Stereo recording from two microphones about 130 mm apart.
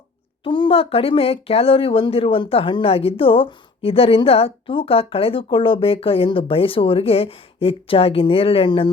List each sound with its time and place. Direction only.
0.4 s speech: 40° left (ahead or behind)